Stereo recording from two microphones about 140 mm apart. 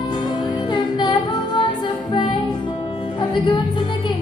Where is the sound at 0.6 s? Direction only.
35° left (ahead or behind).